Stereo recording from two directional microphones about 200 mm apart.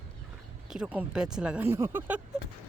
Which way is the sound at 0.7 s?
5° right (ahead or behind).